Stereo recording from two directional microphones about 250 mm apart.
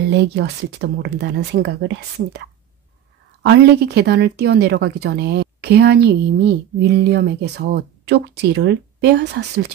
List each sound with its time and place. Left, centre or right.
0.1 s speech: right
3.4 s speech: right